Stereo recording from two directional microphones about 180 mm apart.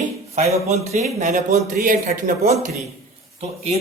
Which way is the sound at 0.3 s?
35° right (ahead or behind).